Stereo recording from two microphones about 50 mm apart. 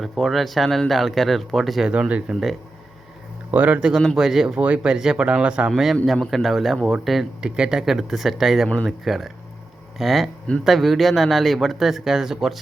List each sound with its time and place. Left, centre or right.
0.0 s speech: centre
1.9 s speech: right
3.5 s speech: right
3.8 s speech: centre
4.5 s speech: right
4.9 s speech: centre
5.7 s speech: centre
7.4 s speech: centre